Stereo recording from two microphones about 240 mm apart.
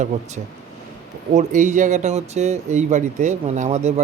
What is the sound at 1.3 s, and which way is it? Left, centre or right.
Speech, right.